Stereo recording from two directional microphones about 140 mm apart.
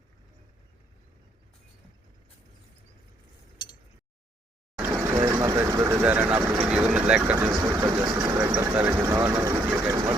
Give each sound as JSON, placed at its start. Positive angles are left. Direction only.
{"t": 4.8, "sound": "vehicle", "side_deg": -10}
{"t": 5.4, "sound": "vehicle", "side_deg": -20}
{"t": 8.5, "sound": "vehicle", "side_deg": -15}